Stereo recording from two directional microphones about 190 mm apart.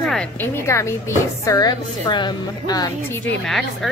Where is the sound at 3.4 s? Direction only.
Centre (ahead or behind).